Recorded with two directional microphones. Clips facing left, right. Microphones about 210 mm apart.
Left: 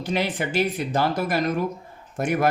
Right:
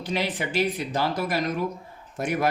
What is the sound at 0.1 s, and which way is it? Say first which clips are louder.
Speech: left 2 dB; 50° left (ahead or behind).